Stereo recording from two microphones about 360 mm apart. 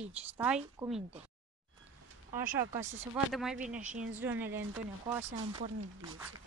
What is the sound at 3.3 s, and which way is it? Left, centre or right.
Speech, centre.